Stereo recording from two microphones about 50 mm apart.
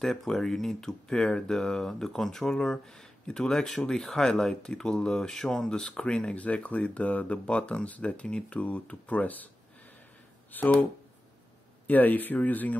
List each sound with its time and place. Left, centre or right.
0.0 s speech: centre; by 10.7 s left
11.9 s speech: left